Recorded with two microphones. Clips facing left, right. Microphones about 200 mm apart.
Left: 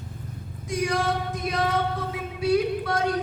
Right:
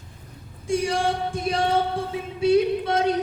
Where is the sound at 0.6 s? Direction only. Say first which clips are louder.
Right 3 dB; 25° right (ahead or behind).